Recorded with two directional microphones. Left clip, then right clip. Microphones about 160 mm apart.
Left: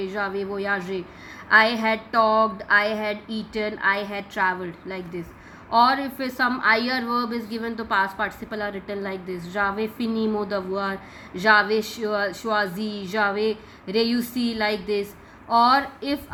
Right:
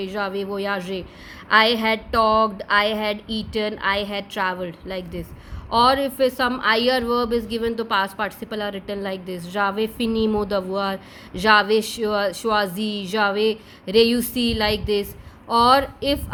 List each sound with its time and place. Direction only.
0.0 s a woman's voice: 35° right (ahead or behind)